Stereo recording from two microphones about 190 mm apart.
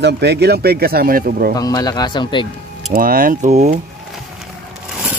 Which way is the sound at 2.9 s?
50° right (ahead or behind).